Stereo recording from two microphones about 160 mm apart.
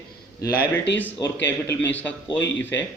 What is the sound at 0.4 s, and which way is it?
Speech, 70° left (ahead or behind).